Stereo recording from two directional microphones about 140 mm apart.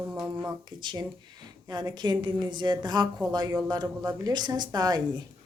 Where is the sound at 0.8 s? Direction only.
30° right (ahead or behind).